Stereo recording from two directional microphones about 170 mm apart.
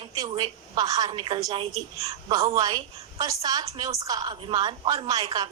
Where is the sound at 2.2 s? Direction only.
20° right (ahead or behind).